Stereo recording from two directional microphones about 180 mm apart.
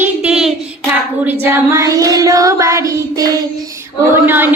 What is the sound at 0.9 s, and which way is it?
A woman's voice, 10° right (ahead or behind).